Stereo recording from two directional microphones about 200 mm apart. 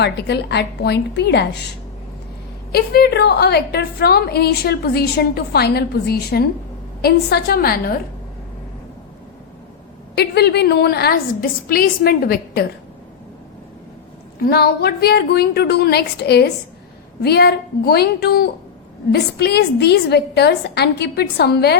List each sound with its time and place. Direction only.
0.0 s a woman's voice: 55° left (ahead or behind)
2.7 s a woman's voice: 55° left (ahead or behind)
10.2 s a woman's voice: 55° left (ahead or behind)
14.4 s a woman's voice: 50° left (ahead or behind)